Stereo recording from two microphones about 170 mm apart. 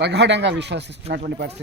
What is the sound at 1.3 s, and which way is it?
Speech, 80° right.